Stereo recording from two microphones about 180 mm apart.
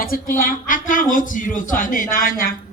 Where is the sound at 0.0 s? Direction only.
50° left (ahead or behind).